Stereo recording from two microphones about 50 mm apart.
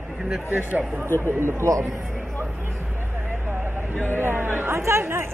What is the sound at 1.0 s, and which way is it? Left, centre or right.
Speech, left.